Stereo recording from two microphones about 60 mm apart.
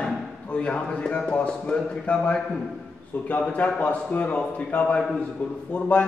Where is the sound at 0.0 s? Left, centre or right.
Centre.